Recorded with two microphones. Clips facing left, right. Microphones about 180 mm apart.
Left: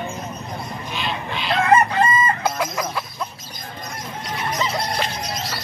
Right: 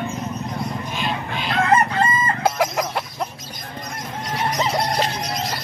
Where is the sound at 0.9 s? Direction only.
45° right (ahead or behind).